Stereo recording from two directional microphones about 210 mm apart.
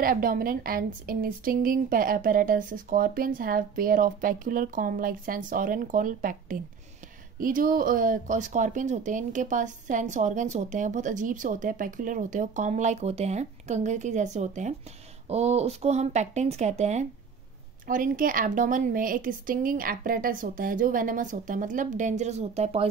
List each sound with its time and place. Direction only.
0.0 s speech: 45° right (ahead or behind)